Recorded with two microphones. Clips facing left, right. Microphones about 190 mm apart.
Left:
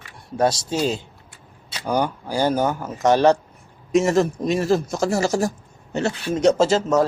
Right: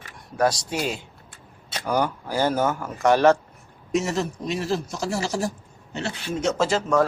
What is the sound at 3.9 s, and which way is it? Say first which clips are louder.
A man's voice: left 7 dB; 50° left (ahead or behind).